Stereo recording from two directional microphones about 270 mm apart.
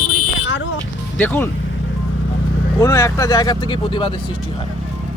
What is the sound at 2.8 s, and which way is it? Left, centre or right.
Speech, centre.